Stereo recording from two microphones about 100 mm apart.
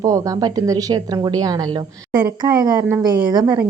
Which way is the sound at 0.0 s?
35° right (ahead or behind).